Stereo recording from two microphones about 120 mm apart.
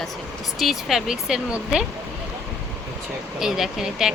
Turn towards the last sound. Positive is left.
turn(degrees=-5)  # may be behind; listen again after turning